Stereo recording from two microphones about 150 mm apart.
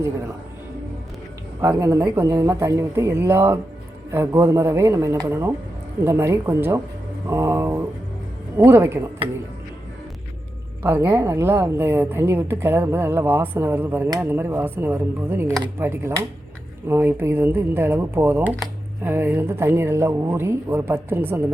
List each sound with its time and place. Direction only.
1.6 s mantra: 20° right (ahead or behind)
2.1 s a woman's voice: 20° right (ahead or behind)
7.3 s mantra: 20° right (ahead or behind)
8.5 s a woman's voice: 15° right (ahead or behind)
10.8 s a woman's voice: 15° right (ahead or behind)